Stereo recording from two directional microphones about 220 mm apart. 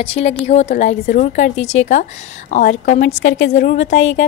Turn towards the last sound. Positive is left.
turn(degrees=30)  # may be behind; listen again after turning